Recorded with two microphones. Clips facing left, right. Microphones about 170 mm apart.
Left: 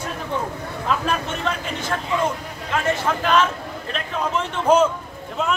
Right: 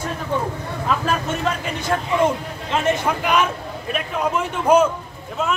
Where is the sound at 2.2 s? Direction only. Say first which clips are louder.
Right 5 dB; 20° right (ahead or behind).